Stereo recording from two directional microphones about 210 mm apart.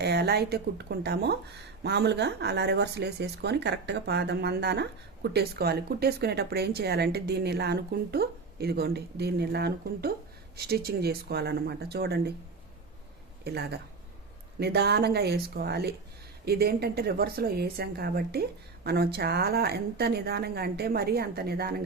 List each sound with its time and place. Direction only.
0.0 s speech: 50° right (ahead or behind)
13.4 s speech: 50° right (ahead or behind)